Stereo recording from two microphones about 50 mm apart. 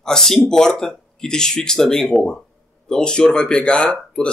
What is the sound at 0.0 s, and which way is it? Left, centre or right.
Speech, centre.